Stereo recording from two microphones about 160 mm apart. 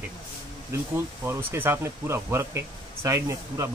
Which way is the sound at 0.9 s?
15° right (ahead or behind).